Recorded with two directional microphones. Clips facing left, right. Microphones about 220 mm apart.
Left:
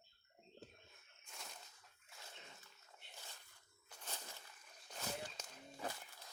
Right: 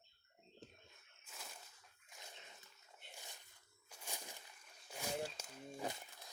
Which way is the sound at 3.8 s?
10° right (ahead or behind).